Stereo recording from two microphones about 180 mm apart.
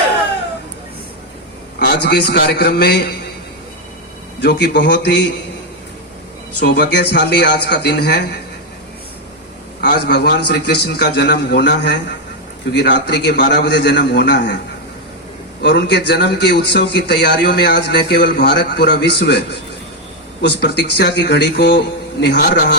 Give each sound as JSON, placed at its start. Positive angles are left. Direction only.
{"t": 1.8, "sound": "a man's voice", "side_deg": 65}
{"t": 4.4, "sound": "a man's voice", "side_deg": 75}
{"t": 6.6, "sound": "a man's voice", "side_deg": 70}
{"t": 9.8, "sound": "a man's voice", "side_deg": 70}
{"t": 15.6, "sound": "a man's voice", "side_deg": 70}